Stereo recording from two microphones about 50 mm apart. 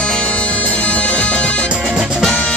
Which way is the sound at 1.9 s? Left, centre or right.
Centre.